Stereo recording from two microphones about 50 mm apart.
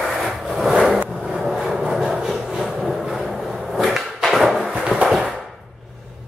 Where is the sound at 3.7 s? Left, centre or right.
Centre.